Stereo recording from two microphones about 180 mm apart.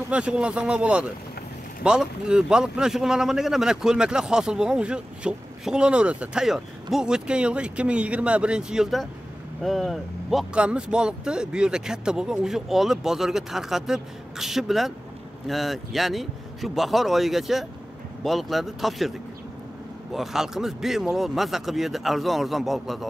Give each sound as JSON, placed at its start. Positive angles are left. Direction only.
{"t": 0.1, "sound": "speech", "side_deg": -5}